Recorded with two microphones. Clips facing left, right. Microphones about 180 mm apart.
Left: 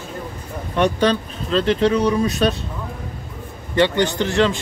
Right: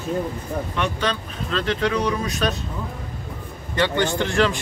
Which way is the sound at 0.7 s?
35° left (ahead or behind).